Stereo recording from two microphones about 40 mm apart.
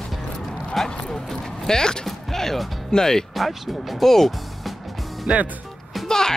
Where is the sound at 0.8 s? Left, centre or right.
Centre.